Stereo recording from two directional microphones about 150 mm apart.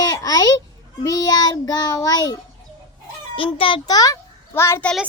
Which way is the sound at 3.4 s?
35° left (ahead or behind).